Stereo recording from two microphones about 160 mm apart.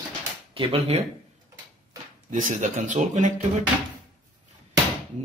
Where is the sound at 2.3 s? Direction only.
50° right (ahead or behind).